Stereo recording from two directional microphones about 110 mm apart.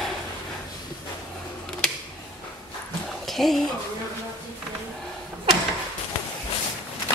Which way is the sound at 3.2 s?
Centre (ahead or behind).